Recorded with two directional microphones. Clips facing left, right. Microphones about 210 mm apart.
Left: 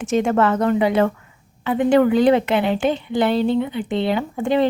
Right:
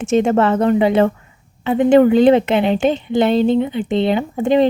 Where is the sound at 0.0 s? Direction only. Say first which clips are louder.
Right 3 dB; 25° right (ahead or behind).